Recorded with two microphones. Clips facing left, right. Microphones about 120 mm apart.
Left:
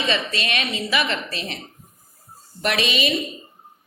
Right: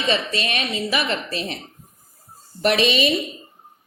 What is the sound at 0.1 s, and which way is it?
A woman's voice, 35° right (ahead or behind).